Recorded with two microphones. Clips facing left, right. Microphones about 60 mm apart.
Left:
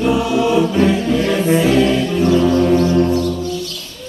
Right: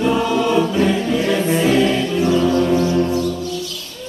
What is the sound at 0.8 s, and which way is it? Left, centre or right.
Music, centre.